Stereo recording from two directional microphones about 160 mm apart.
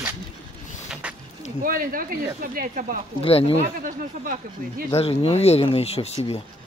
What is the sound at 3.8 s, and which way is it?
Speech, 60° right (ahead or behind).